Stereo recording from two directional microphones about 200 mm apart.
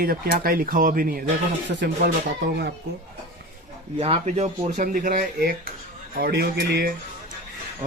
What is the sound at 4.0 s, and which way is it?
A man's voice, 30° right (ahead or behind).